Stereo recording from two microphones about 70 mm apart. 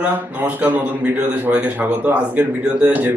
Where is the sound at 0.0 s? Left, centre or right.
Right.